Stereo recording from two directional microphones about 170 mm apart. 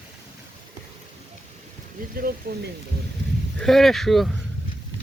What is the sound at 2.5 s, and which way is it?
Speech, 65° right (ahead or behind).